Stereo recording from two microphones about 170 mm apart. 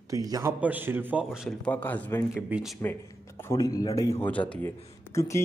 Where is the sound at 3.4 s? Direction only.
20° left (ahead or behind).